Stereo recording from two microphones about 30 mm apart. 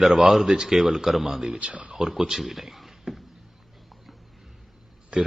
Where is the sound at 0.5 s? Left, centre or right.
Right.